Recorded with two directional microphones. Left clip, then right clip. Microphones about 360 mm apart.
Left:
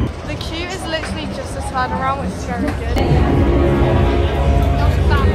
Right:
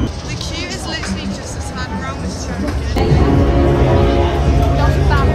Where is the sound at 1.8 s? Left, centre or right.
Centre.